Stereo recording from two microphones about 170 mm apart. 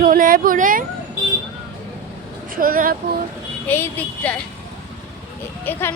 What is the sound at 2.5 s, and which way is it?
Speech, 55° right (ahead or behind).